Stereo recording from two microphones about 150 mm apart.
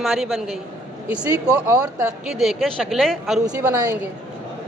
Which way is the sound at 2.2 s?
Centre (ahead or behind).